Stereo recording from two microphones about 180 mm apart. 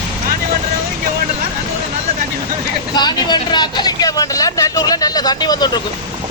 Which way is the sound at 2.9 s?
25° left (ahead or behind).